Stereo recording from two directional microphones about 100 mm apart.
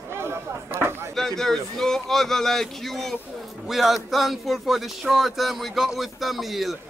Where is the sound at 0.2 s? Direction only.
25° right (ahead or behind).